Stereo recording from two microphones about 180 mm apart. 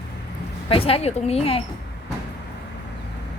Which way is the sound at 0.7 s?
30° left (ahead or behind).